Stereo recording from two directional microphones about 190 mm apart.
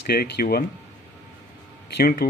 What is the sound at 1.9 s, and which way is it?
Speech, 50° left (ahead or behind).